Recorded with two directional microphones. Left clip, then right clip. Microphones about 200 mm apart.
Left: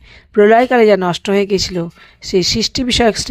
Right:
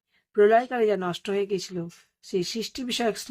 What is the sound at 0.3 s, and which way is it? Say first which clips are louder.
Speech: left 11 dB; 35° left (ahead or behind).